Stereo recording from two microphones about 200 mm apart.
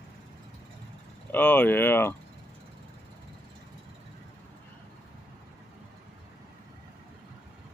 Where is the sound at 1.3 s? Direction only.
10° left (ahead or behind).